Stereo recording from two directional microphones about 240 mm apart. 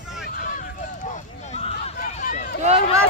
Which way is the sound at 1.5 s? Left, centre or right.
Left.